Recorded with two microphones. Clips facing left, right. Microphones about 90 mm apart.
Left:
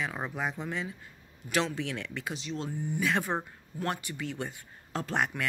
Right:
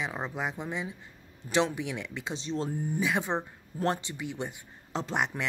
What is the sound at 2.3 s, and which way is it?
Speech, 35° right (ahead or behind).